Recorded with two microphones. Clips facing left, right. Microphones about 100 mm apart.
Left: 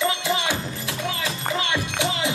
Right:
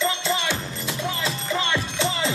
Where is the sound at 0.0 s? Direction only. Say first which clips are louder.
Left 1 dB; 15° left (ahead or behind).